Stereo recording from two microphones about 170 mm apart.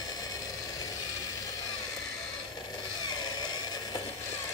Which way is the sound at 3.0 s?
25° left (ahead or behind).